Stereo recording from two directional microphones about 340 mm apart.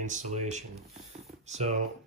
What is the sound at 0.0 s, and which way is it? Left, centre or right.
Speech, right.